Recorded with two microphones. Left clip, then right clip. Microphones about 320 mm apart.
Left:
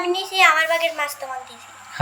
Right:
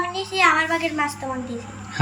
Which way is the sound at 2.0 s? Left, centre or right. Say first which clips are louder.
Left 1 dB; centre.